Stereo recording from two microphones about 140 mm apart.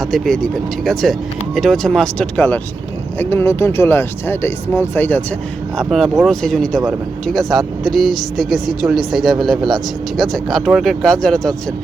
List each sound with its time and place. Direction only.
0.0 s speech: centre (ahead or behind)
5.9 s speech: centre (ahead or behind)